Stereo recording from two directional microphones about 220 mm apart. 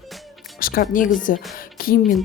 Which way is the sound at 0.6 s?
40° left (ahead or behind).